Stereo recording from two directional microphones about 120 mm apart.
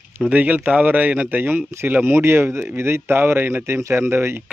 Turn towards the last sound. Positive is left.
turn(degrees=-20)  # may be behind; listen again after turning